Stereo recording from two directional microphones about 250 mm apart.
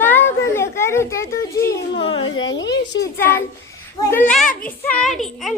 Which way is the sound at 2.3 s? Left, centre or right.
Left.